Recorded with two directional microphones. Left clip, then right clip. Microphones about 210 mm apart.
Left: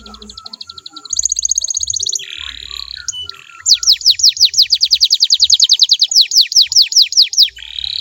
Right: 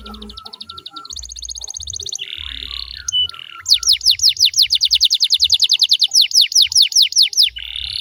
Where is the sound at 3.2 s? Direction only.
25° right (ahead or behind).